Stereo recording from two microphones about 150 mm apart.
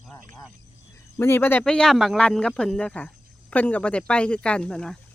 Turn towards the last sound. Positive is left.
turn(degrees=5)  # may be behind; listen again after turning